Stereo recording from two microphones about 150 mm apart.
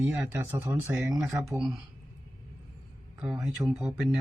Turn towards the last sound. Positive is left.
turn(degrees=0)  # may be behind; listen again after turning